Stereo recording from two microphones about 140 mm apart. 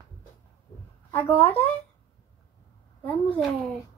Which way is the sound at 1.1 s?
15° left (ahead or behind).